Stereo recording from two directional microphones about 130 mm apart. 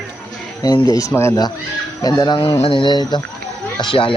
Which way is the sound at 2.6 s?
40° left (ahead or behind).